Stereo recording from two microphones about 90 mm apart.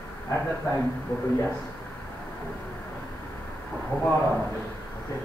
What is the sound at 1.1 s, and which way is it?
Speech, 25° left (ahead or behind).